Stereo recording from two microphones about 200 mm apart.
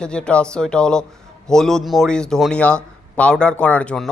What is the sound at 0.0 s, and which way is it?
Speech, 5° left (ahead or behind).